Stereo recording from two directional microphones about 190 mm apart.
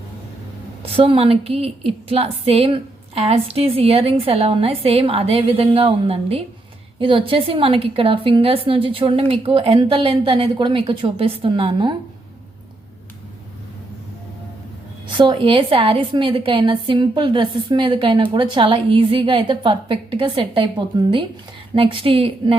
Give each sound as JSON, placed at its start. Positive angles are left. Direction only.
{"t": 0.8, "sound": "a woman's voice", "side_deg": -30}
{"t": 15.1, "sound": "a woman's voice", "side_deg": -25}